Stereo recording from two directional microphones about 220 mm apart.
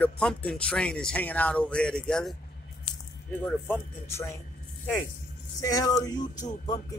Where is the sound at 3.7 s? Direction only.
10° left (ahead or behind).